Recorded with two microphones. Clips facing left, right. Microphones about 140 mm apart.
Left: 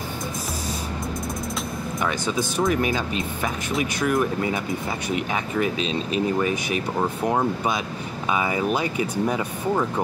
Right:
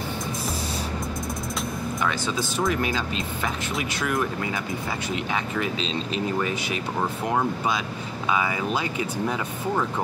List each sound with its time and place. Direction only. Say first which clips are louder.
2.0 s speech: left 3 dB; 15° left (ahead or behind)
3.7 s speech: left 6 dB; centre (ahead or behind)
6.4 s speech: left 3 dB; 15° left (ahead or behind)
9.3 s speech: left 3 dB; 10° left (ahead or behind)